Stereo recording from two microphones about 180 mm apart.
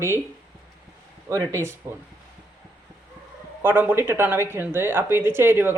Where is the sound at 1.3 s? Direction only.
15° right (ahead or behind).